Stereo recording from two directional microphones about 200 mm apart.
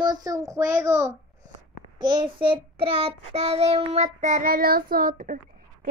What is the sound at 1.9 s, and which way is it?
Child singing, 25° right (ahead or behind).